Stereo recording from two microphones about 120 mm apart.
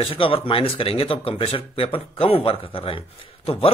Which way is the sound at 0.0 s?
50° left (ahead or behind).